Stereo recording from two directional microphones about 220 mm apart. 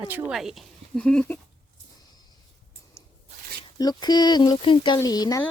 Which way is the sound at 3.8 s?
20° left (ahead or behind).